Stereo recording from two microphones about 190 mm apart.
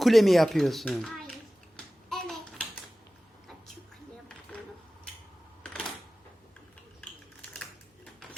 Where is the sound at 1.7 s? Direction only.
Centre (ahead or behind).